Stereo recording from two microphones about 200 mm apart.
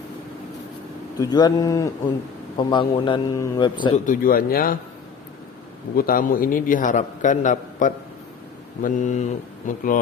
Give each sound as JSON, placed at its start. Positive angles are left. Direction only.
{"t": 1.2, "sound": "a man's voice", "side_deg": 20}
{"t": 3.9, "sound": "speech", "side_deg": 40}
{"t": 6.0, "sound": "a man's voice", "side_deg": 45}